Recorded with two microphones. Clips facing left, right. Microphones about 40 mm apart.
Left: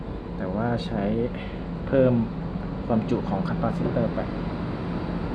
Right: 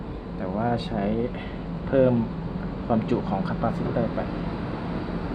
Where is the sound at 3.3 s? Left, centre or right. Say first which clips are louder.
Even; centre.